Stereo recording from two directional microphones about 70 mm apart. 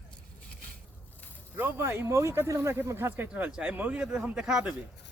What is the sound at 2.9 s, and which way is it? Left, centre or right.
Speech, right.